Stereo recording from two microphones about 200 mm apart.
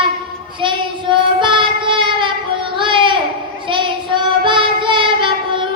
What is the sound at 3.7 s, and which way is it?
Child singing, 25° right (ahead or behind).